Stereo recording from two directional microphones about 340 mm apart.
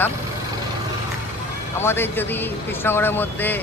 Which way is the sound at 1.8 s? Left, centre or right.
Centre.